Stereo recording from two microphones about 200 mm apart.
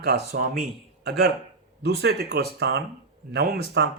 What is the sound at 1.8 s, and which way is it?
Speech, 55° right (ahead or behind).